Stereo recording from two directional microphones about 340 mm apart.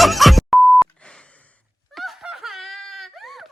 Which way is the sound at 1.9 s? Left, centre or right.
Centre.